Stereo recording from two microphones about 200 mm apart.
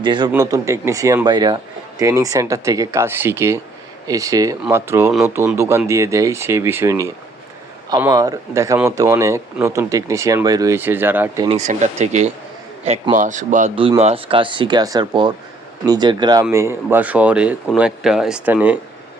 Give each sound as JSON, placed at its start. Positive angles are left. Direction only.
{"t": 0.0, "sound": "speech", "side_deg": -25}
{"t": 11.4, "sound": "a man's voice", "side_deg": -35}
{"t": 13.7, "sound": "speech", "side_deg": -25}